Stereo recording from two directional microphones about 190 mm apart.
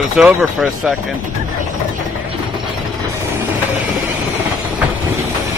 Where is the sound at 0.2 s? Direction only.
Centre (ahead or behind).